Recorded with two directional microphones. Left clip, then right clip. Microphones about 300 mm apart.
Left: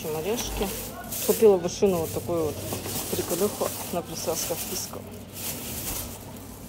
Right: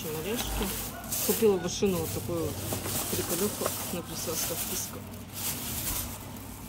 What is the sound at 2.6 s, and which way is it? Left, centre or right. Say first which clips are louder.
Speech: left 2 dB; centre.